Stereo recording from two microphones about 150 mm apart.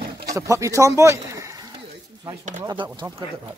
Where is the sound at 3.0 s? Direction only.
30° right (ahead or behind).